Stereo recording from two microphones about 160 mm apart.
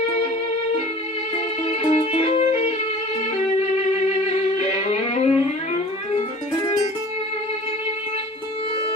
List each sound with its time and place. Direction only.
1.8 s music: 35° left (ahead or behind)
3.9 s music: 45° left (ahead or behind)